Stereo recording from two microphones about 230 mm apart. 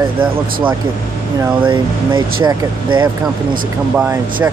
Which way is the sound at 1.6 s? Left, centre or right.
Right.